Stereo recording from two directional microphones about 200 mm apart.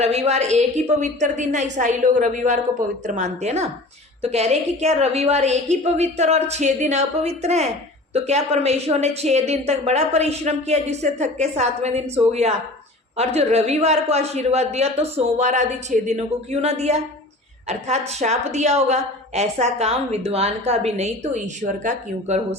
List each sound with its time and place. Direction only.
0.0 s a woman's voice: 30° right (ahead or behind)